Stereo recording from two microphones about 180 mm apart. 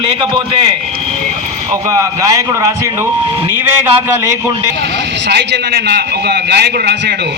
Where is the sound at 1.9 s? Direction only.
20° right (ahead or behind).